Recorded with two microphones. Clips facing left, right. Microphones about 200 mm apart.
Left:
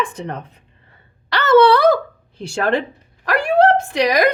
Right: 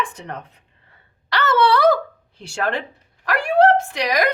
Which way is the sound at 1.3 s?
25° left (ahead or behind).